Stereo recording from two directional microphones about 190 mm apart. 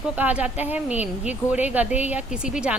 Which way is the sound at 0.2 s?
5° right (ahead or behind).